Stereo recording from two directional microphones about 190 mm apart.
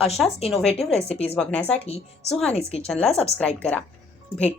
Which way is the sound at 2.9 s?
5° left (ahead or behind).